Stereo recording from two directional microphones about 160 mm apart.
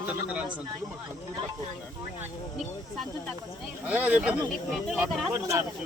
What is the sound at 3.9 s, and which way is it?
Speech, 10° right (ahead or behind).